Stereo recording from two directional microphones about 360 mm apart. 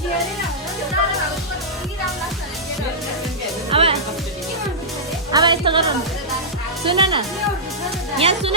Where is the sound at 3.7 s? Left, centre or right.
Centre.